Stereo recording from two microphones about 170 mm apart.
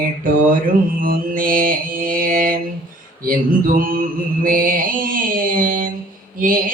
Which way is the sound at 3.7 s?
55° right (ahead or behind).